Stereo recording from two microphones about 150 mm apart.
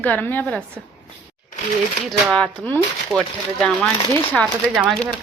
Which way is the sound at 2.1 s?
5° left (ahead or behind).